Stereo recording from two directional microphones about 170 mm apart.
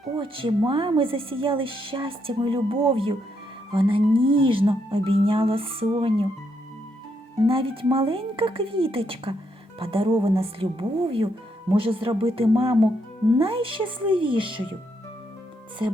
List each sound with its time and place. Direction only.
0.2 s speech: 30° right (ahead or behind)
7.4 s speech: 30° right (ahead or behind)